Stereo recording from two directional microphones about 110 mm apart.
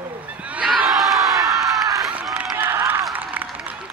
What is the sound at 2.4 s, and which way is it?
Run, 20° right (ahead or behind).